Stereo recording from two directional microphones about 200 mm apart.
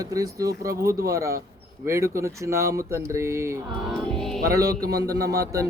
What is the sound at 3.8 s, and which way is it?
Music, centre (ahead or behind).